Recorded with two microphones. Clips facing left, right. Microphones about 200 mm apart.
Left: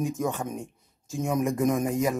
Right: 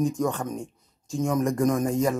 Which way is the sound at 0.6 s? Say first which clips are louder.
Right 2 dB; centre (ahead or behind).